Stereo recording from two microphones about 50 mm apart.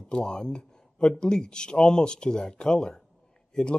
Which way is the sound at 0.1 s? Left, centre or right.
Centre.